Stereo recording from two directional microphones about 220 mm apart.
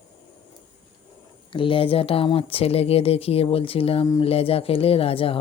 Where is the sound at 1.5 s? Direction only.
25° left (ahead or behind).